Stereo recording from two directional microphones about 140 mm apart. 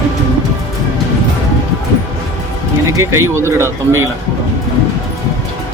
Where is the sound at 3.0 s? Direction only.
20° right (ahead or behind).